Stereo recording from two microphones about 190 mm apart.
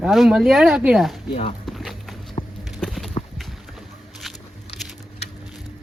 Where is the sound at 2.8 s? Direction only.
Centre (ahead or behind).